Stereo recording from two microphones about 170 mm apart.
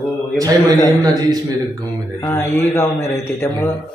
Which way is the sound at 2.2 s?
15° left (ahead or behind).